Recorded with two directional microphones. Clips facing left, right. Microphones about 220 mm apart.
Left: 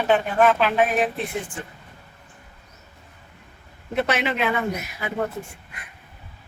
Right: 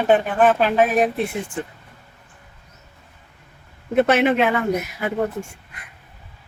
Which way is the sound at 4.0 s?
50° right (ahead or behind).